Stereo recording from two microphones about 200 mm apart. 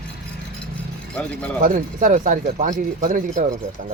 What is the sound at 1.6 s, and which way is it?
Speech, 40° right (ahead or behind).